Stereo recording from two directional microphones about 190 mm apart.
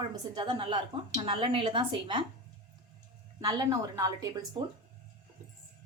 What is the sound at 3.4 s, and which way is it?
Speech, 20° right (ahead or behind).